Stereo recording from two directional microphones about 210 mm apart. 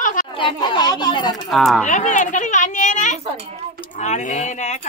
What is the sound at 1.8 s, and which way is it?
Speech, 35° left (ahead or behind).